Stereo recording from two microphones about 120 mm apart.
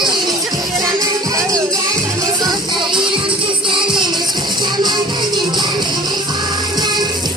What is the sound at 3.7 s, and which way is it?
Music, 45° right (ahead or behind).